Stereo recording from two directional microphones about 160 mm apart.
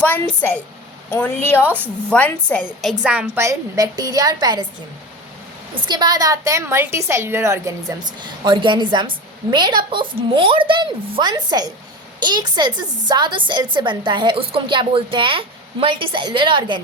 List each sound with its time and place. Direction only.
0.0 s a woman's voice: 10° left (ahead or behind)
3.0 s a woman's voice: 5° right (ahead or behind)
3.4 s a woman's voice: 20° right (ahead or behind)
5.9 s a woman's voice: 25° right (ahead or behind)